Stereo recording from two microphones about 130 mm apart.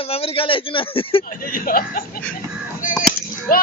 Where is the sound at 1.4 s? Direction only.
90° left.